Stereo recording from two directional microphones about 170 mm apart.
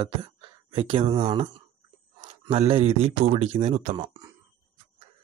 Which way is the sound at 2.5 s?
35° right (ahead or behind).